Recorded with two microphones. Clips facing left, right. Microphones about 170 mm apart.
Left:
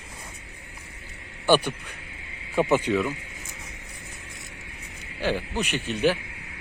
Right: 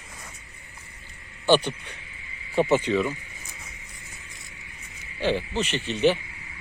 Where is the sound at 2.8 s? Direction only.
5° left (ahead or behind).